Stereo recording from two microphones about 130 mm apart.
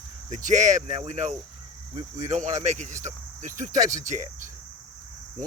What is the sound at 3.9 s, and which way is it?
Speech, 70° right (ahead or behind).